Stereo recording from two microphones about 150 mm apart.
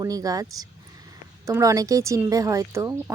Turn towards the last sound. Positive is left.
turn(degrees=-20)  # may be behind; listen again after turning